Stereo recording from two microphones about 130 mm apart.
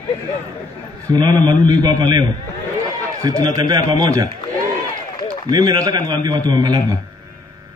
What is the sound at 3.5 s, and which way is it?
A man's voice, 30° right (ahead or behind).